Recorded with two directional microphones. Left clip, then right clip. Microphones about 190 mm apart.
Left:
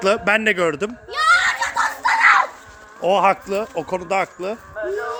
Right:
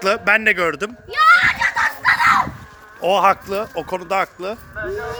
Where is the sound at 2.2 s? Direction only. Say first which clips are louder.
Left 3 dB; 60° right (ahead or behind).